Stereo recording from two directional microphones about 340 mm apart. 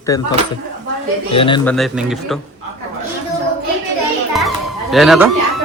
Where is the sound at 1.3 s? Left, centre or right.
Centre.